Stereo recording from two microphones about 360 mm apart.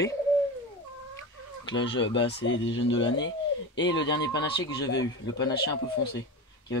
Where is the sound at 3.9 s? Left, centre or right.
Centre.